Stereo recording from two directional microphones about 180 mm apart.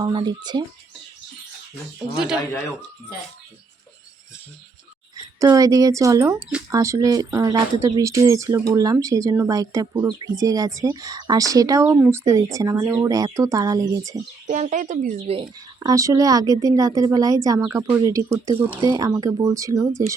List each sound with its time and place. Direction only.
0.0 s speech: 25° right (ahead or behind)
2.1 s a man's voice: 5° right (ahead or behind)
5.1 s a woman's voice: 20° right (ahead or behind)
14.4 s speech: 40° right (ahead or behind)
15.8 s speech: 20° right (ahead or behind)